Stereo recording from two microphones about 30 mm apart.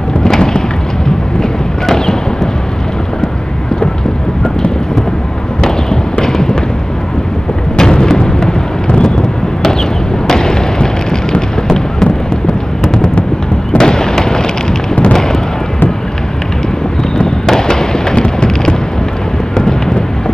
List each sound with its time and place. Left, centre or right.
0.2 s a sound: left
6.2 s fireworks: left
7.7 s artillery fire: left
10.2 s a sound: centre
13.7 s fireworks: left
17.5 s fireworks: left